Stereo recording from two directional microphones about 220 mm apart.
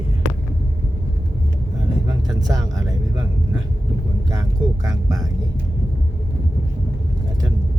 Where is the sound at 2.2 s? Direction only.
15° right (ahead or behind).